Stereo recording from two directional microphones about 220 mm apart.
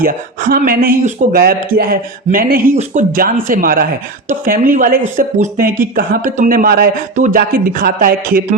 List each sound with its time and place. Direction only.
0.0 s speech: 40° right (ahead or behind)